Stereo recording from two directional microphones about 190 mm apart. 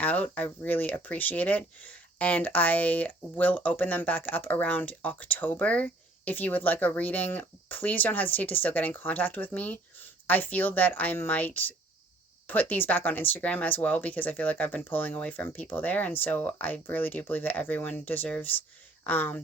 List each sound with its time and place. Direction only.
0.0 s speech: 10° left (ahead or behind)